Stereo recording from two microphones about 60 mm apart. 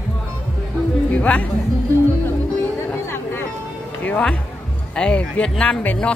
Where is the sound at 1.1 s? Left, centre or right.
Left.